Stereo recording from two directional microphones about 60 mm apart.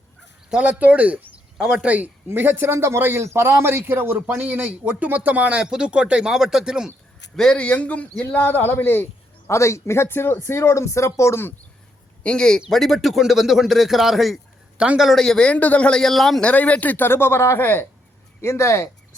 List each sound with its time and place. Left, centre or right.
0.5 s speech: right
1.9 s a man's voice: right
5.5 s speech: centre
7.3 s speech: centre; by 9.0 s left
9.5 s speech: left
12.2 s speech: centre
15.2 s speech: centre
15.5 s speech: left
15.9 s speech: centre
16.4 s speech: left
17.1 s speech: left
18.4 s speech: left